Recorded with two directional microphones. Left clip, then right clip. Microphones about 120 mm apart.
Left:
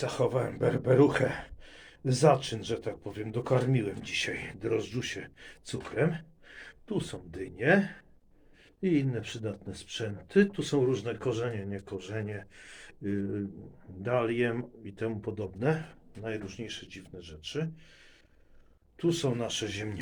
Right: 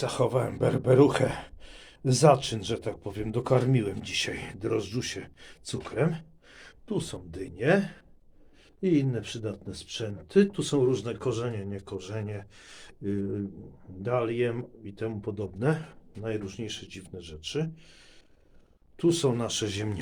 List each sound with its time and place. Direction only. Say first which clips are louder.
0.0 s speech: right 2 dB; 50° right (ahead or behind); by 11.8 s 25° right (ahead or behind)
11.9 s speech: right 1 dB; 40° right (ahead or behind)
14.0 s speech: right 1 dB; 10° right (ahead or behind)
15.5 s speech: right 1 dB; 35° right (ahead or behind)
16.5 s speech: right 3 dB; 60° right (ahead or behind)
18.9 s speech: right 4 dB; 85° right